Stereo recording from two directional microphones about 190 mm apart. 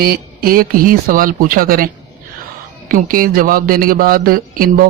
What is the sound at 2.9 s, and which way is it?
Speech, 50° right (ahead or behind).